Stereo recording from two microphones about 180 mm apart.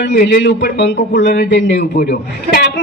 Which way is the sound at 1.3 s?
80° left.